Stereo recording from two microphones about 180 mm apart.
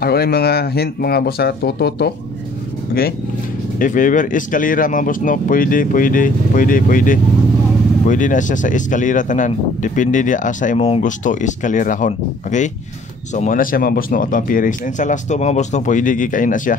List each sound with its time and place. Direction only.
0.0 s speech: 60° left (ahead or behind)
3.8 s speech: 45° left (ahead or behind)